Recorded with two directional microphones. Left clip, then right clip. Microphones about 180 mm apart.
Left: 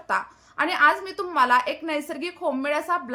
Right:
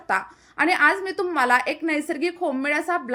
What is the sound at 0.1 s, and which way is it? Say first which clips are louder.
A woman's voice: right 2 dB; 20° right (ahead or behind).